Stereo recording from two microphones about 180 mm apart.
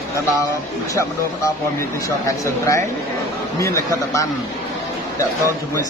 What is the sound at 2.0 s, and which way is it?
Speech, 15° left (ahead or behind).